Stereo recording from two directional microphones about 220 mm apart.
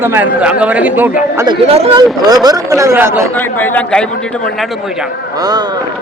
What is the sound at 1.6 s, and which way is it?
Speech, 25° right (ahead or behind).